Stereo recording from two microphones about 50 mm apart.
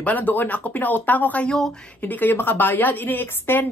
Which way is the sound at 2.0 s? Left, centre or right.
Left.